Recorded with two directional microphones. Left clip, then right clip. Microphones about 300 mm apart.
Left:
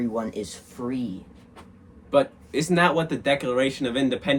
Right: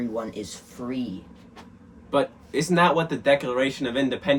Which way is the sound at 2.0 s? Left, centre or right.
Centre.